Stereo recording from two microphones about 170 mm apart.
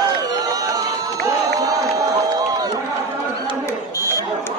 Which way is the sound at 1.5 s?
20° right (ahead or behind).